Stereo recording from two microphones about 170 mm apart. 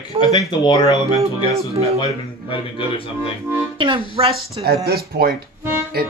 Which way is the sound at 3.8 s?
30° right (ahead or behind).